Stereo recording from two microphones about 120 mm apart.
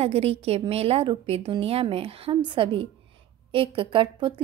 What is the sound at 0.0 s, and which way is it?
A woman's voice, 55° right (ahead or behind).